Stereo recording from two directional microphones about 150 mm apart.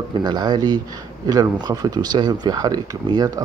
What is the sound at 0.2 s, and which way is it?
Speech, 30° right (ahead or behind).